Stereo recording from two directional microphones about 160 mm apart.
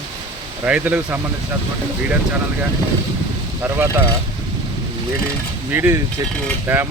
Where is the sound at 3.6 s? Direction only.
15° right (ahead or behind).